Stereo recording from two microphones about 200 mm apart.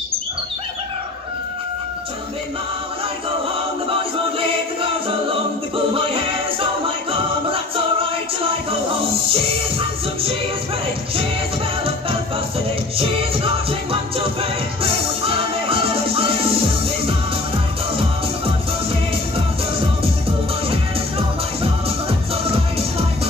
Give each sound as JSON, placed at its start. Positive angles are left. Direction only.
{"t": 5.9, "sound": "music", "side_deg": -25}
{"t": 12.9, "sound": "music", "side_deg": -25}
{"t": 21.8, "sound": "music", "side_deg": -30}